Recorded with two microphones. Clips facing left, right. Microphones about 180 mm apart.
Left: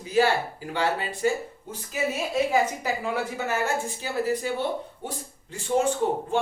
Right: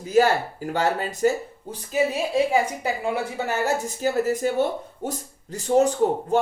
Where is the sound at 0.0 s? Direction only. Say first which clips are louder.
Right 3 dB; 45° right (ahead or behind).